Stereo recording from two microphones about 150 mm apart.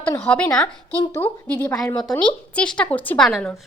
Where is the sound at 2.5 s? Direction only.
5° left (ahead or behind).